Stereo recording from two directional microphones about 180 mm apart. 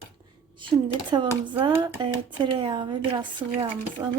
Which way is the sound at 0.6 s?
25° right (ahead or behind).